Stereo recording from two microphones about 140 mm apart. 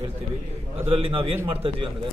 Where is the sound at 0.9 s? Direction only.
40° right (ahead or behind).